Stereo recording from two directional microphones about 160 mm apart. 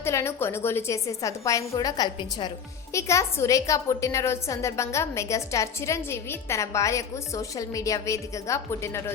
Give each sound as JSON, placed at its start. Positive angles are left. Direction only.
{"t": 0.0, "sound": "a woman's voice", "side_deg": 15}